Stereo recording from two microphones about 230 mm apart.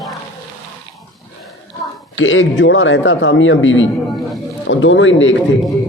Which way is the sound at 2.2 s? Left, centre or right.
Left.